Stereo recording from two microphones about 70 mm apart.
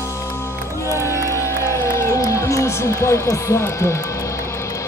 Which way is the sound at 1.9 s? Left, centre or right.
Left.